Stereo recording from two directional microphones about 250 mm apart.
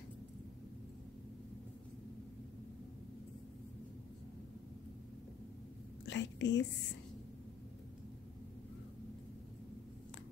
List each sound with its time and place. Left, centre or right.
6.0 s whispering: left